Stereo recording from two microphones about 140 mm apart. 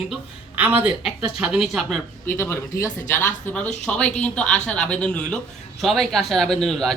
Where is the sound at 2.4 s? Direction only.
20° left (ahead or behind).